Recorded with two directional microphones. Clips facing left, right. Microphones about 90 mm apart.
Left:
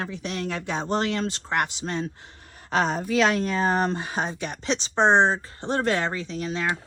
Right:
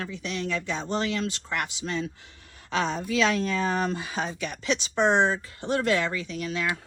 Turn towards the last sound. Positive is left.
turn(degrees=30)  # may be behind; listen again after turning